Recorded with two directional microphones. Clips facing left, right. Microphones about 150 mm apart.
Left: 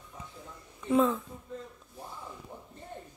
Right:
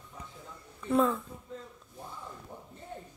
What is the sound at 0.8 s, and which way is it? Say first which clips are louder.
Speech: left 1 dB; centre (ahead or behind).